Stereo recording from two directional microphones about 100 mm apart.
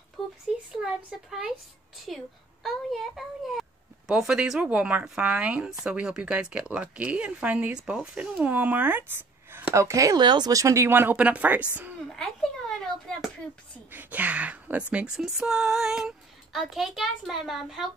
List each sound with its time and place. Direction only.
0.2 s a sound: centre (ahead or behind)
2.0 s a child's voice: centre (ahead or behind); by 10.1 s 30° right (ahead or behind)
10.1 s speech: 45° right (ahead or behind)
10.5 s speech: 30° right (ahead or behind); by 11.6 s 15° right (ahead or behind)
12.2 s a sound: 5° left (ahead or behind)
13.9 s a child's voice: 15° right (ahead or behind)